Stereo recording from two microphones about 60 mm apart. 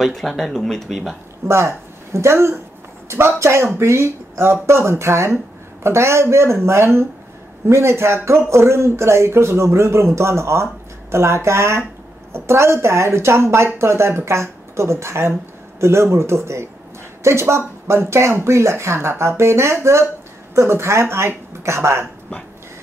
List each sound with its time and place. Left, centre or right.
0.0 s speech: centre
1.4 s speech: right